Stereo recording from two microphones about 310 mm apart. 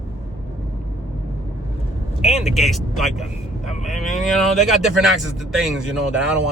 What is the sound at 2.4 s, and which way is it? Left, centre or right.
Speech, centre.